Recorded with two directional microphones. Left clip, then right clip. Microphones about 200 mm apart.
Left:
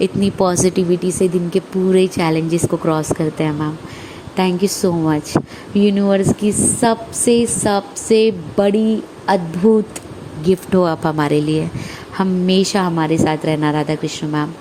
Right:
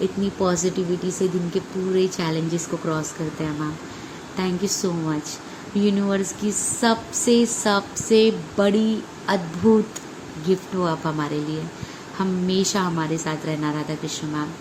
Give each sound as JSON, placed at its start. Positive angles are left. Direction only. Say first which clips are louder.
{"t": 0.0, "sound": "a woman's voice", "louder": "left 7 dB", "side_deg": 40}